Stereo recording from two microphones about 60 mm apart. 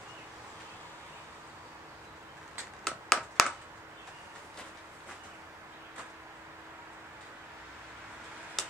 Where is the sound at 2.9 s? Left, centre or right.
Centre.